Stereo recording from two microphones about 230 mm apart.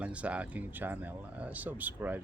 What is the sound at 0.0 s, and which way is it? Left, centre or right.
Speech, centre.